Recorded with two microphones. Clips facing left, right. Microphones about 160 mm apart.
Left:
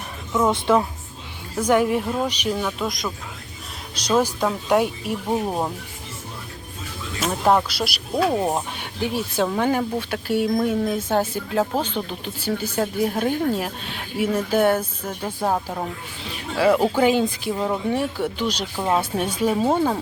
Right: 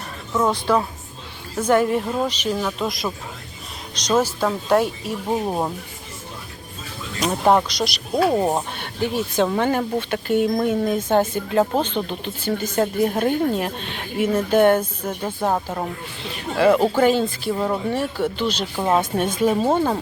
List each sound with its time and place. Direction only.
0.7 s a woman's voice: 20° left (ahead or behind)
1.6 s speech: 10° left (ahead or behind)
2.6 s speech: centre (ahead or behind)
4.2 s speech: 15° left (ahead or behind)
5.3 s speech: 5° right (ahead or behind)
7.3 s speech: 10° right (ahead or behind)
7.7 s speech: 5° left (ahead or behind)
8.1 s speech: 10° right (ahead or behind)
8.8 s speech: 10° left (ahead or behind)
12.8 s speech: centre (ahead or behind)
14.8 s speech: 10° right (ahead or behind)
16.6 s speech: 5° left (ahead or behind)
17.5 s speech: 5° left (ahead or behind)
18.8 s speech: centre (ahead or behind)